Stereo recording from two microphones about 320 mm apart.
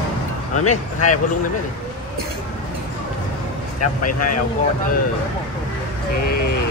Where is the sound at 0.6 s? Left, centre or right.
Left.